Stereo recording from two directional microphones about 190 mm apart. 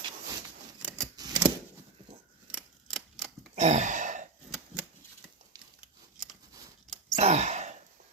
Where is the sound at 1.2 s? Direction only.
20° right (ahead or behind).